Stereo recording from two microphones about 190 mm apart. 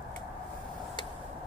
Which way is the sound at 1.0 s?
25° left (ahead or behind).